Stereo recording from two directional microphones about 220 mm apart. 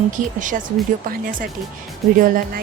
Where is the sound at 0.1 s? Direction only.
35° right (ahead or behind).